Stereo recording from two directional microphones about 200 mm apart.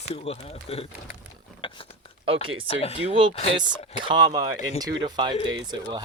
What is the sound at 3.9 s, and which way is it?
Speech, 25° right (ahead or behind).